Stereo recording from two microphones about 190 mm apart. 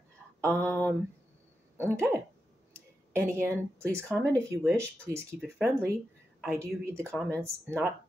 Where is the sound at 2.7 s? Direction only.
15° right (ahead or behind).